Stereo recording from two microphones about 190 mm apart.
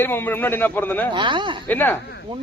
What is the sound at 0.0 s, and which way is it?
A man's voice, 10° left (ahead or behind).